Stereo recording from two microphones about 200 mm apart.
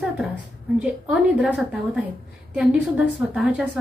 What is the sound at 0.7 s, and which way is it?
A woman's voice, 5° right (ahead or behind).